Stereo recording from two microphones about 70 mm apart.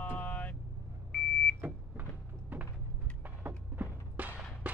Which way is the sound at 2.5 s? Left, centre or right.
Right.